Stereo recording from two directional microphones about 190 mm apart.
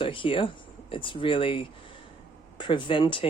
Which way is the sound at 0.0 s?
25° left (ahead or behind).